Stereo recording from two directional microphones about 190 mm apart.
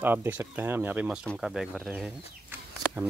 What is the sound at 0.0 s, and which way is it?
Speech, 10° right (ahead or behind).